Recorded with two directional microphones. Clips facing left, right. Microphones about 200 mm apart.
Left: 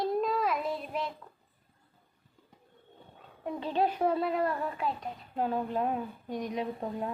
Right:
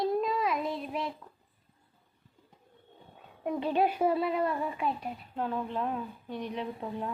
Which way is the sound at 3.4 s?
15° right (ahead or behind).